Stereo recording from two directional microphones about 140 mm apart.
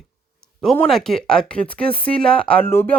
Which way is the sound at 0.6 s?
Centre (ahead or behind).